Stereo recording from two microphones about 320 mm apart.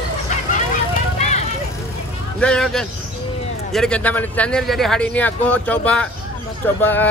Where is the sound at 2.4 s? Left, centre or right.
Centre.